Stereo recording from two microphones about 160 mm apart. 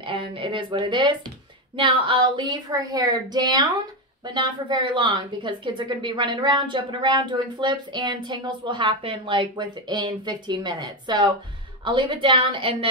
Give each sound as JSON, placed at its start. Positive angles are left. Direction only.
{"t": 0.0, "sound": "a woman's voice", "side_deg": -30}